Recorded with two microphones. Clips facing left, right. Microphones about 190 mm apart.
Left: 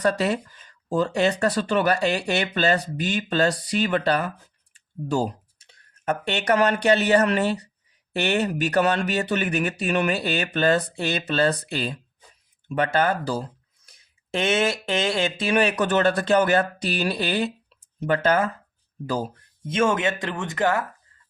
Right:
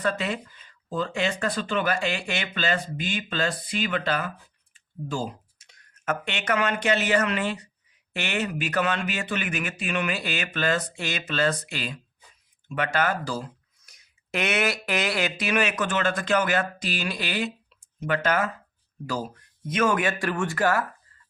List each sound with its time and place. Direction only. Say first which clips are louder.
0.0 s speech: left 5 dB; 40° left (ahead or behind)
19.6 s speech: left 2 dB; 25° left (ahead or behind)